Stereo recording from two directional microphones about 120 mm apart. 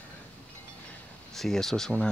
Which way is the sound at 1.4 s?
5° left (ahead or behind).